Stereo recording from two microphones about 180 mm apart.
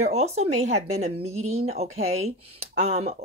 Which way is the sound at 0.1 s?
40° right (ahead or behind).